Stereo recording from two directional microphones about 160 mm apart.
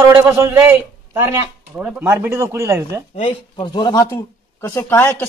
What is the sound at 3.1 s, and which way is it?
Speech, 40° left (ahead or behind).